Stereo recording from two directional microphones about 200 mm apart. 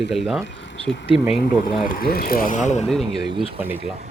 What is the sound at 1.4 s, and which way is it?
Speech, 45° left (ahead or behind).